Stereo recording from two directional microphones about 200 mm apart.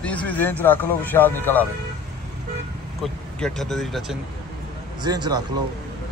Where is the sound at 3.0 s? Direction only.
Centre (ahead or behind).